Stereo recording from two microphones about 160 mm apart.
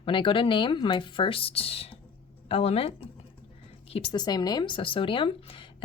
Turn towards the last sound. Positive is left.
turn(degrees=35)  # may be behind; listen again after turning